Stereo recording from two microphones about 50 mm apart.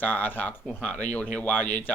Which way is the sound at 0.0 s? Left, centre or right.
Left.